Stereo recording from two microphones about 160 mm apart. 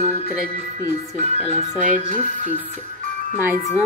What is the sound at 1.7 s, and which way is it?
Speech, 50° right (ahead or behind).